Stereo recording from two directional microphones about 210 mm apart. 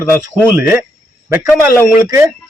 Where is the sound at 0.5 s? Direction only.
5° right (ahead or behind).